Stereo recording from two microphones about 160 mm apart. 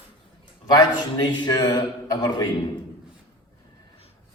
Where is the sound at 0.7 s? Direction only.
25° left (ahead or behind).